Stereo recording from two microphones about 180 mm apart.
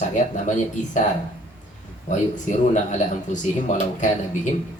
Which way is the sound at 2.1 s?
40° left (ahead or behind).